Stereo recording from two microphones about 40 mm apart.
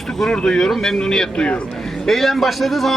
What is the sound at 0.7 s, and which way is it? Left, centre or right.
Speech, centre.